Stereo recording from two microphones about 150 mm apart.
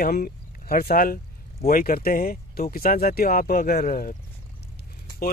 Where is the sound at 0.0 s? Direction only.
90° left; by 4.2 s 65° left (ahead or behind).